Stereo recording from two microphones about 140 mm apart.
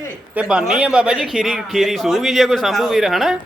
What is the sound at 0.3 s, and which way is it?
Speech, 5° right (ahead or behind).